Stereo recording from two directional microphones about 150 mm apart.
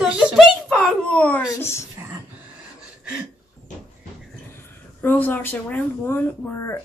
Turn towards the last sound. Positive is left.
turn(degrees=20)  # may be behind; listen again after turning